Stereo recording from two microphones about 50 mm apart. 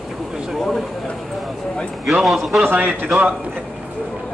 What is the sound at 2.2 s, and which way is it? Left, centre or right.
Speech, centre.